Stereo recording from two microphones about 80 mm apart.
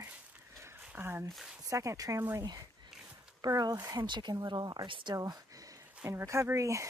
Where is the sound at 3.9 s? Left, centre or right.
Right.